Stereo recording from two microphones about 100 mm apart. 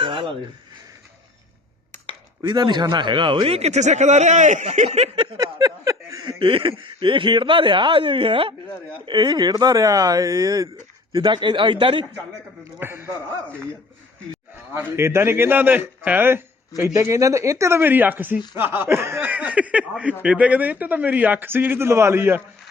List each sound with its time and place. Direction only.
0.0 s a sound: 60° right (ahead or behind)
2.4 s a man's voice: 50° right (ahead or behind); by 3.8 s 90° right
4.9 s speech: 90° right
5.4 s a sound: 35° right (ahead or behind)
6.4 s speech: 60° right (ahead or behind)
9.0 s speech: 50° right (ahead or behind)
11.1 s a man's voice: 50° right (ahead or behind)
12.8 s a man's voice: 20° right (ahead or behind)
14.7 s a man's voice: 25° right (ahead or behind)